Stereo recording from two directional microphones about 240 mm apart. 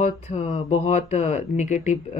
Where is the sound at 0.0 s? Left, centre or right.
Left.